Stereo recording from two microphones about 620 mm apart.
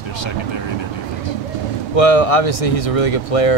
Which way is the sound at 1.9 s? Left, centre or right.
Left.